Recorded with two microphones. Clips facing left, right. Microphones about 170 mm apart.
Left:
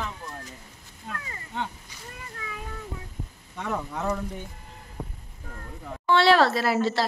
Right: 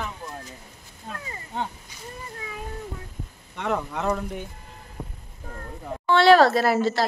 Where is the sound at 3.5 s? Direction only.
75° right (ahead or behind).